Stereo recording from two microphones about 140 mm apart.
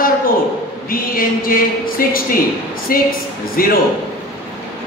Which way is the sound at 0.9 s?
90° left.